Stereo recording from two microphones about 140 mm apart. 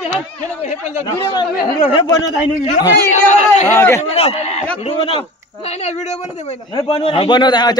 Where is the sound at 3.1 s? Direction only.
55° left (ahead or behind).